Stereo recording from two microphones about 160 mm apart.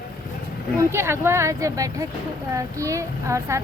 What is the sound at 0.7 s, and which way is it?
Speech, 15° right (ahead or behind).